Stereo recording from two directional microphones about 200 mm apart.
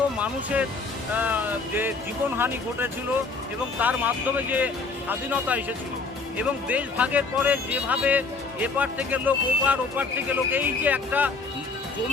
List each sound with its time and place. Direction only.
0.2 s speech: 5° right (ahead or behind)